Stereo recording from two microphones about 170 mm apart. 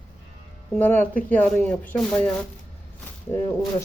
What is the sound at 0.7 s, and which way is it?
Speech, 10° left (ahead or behind).